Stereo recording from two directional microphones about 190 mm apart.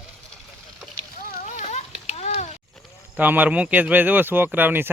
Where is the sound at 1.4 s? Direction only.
40° left (ahead or behind).